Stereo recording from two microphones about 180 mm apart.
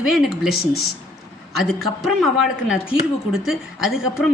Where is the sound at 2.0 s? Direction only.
Centre (ahead or behind).